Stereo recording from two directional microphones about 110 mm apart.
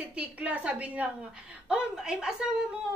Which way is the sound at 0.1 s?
10° right (ahead or behind).